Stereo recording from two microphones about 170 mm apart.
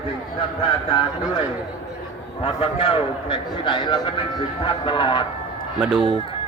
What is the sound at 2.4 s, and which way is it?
A man's voice, 35° left (ahead or behind).